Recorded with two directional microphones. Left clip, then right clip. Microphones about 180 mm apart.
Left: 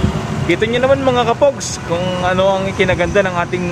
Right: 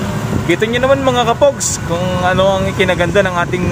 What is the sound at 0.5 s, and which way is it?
Speech, 15° right (ahead or behind).